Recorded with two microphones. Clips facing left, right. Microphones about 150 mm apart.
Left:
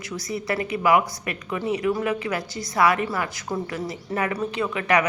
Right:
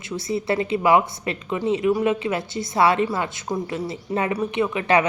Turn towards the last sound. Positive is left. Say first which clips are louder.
# right 3 dB
turn(degrees=-25)  # may be behind; listen again after turning